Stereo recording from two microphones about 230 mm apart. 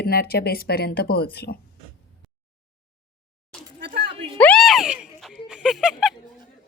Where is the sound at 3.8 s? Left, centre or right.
Right.